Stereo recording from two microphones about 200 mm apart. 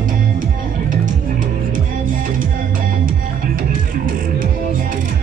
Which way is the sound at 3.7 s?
45° right (ahead or behind).